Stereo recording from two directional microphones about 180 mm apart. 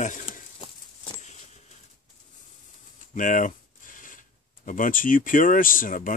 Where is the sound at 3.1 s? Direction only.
45° left (ahead or behind).